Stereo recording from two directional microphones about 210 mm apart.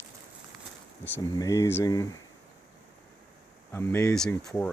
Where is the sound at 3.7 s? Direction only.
10° left (ahead or behind).